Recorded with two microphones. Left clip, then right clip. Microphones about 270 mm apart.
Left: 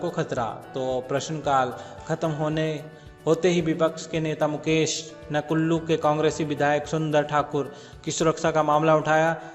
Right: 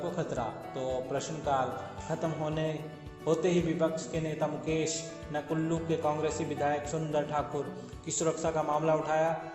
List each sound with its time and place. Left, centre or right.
0.0 s a man's voice: left